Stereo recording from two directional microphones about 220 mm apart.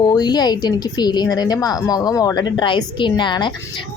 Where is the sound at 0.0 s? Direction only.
15° left (ahead or behind).